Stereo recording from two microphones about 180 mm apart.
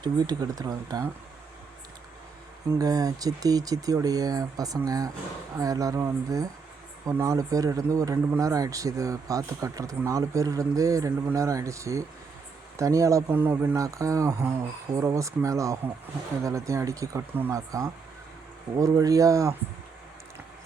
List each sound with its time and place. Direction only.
0.0 s speech: 20° right (ahead or behind)
2.7 s speech: 20° right (ahead or behind)